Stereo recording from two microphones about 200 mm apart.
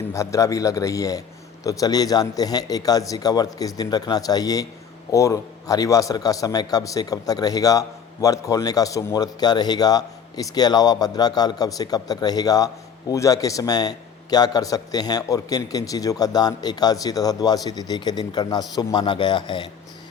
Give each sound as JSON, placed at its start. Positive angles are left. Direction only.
{"t": 0.1, "sound": "a man's voice", "side_deg": 15}